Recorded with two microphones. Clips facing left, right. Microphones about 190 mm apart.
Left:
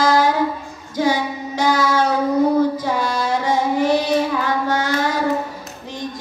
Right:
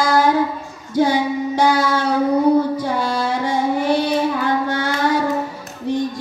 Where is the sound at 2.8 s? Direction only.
55° right (ahead or behind).